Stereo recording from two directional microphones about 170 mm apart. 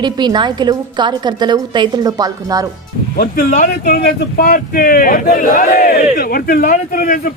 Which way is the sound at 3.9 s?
60° left (ahead or behind).